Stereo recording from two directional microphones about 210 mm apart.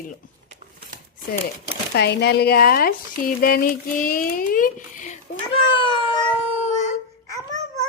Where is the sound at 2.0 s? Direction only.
50° left (ahead or behind).